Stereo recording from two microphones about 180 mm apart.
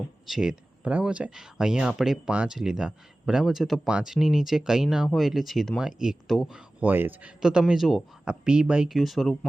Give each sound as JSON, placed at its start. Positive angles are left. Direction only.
{"t": 0.3, "sound": "speech", "side_deg": -5}